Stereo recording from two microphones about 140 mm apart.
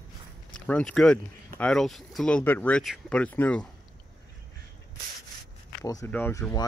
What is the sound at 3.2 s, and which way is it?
Speech, 10° left (ahead or behind).